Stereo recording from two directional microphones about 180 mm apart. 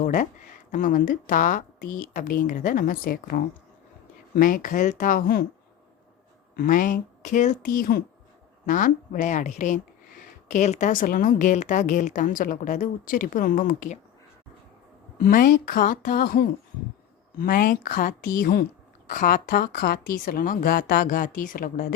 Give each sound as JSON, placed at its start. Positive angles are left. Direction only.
{"t": 0.0, "sound": "speech", "side_deg": 45}
{"t": 6.6, "sound": "speech", "side_deg": 50}
{"t": 15.2, "sound": "a woman's voice", "side_deg": 50}